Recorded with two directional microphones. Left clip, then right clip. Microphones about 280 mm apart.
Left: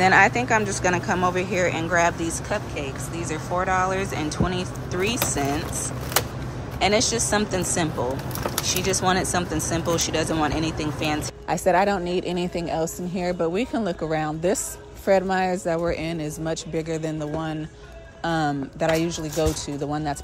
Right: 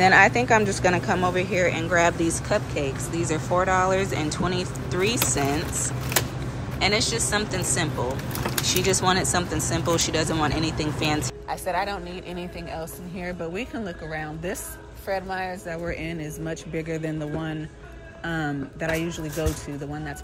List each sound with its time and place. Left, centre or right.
0.0 s speech: centre
6.8 s speech: centre
11.4 s speech: left
12.1 s a woman's voice: left